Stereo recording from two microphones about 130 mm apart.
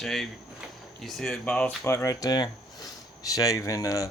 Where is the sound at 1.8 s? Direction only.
20° left (ahead or behind).